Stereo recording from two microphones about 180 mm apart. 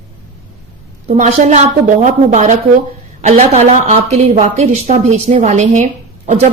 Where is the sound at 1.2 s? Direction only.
40° right (ahead or behind).